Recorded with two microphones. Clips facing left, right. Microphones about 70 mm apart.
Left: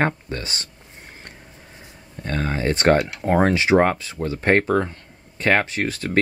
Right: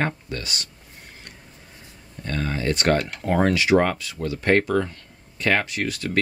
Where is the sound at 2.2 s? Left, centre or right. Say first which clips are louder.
Left 2 dB; left.